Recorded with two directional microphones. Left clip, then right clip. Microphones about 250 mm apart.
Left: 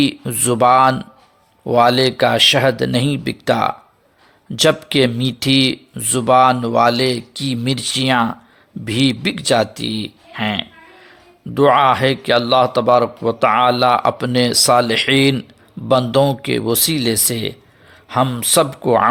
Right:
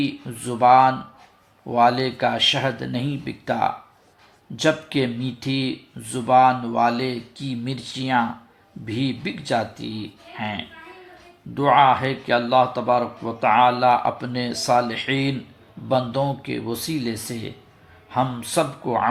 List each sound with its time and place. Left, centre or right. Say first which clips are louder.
0.0 s speech: left 9 dB; left